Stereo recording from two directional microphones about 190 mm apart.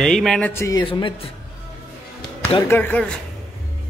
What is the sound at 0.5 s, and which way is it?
Speech, 15° left (ahead or behind).